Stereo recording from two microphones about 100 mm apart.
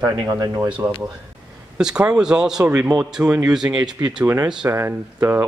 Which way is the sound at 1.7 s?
10° right (ahead or behind).